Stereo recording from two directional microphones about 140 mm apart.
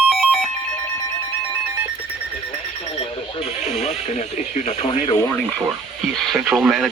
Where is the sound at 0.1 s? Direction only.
Centre (ahead or behind).